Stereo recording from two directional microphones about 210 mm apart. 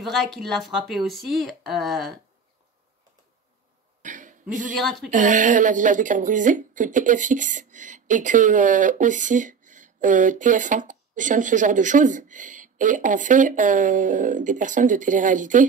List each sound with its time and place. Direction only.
0.0 s speech: centre (ahead or behind)
4.0 s cough: 35° right (ahead or behind)
4.7 s speech: centre (ahead or behind)
5.1 s speech: 40° right (ahead or behind)